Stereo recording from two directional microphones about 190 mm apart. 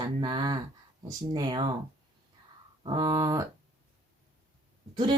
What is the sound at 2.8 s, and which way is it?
Speech, 25° right (ahead or behind).